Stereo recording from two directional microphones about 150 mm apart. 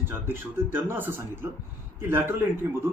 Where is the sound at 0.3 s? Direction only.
15° right (ahead or behind).